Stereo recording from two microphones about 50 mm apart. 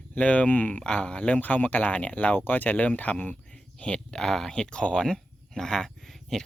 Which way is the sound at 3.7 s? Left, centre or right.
Left.